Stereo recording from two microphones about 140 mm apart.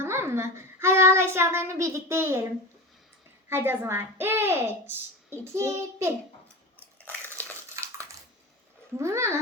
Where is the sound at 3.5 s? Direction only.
15° right (ahead or behind).